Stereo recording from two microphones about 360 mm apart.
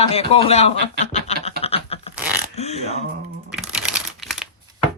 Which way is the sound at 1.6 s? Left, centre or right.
Centre.